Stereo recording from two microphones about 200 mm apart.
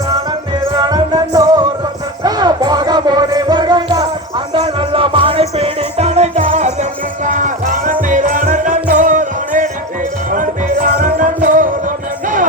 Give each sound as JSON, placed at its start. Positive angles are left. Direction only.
{"t": 0.1, "sound": "music", "side_deg": -20}